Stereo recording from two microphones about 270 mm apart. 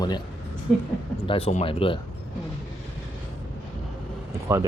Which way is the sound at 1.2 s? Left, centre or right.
Centre.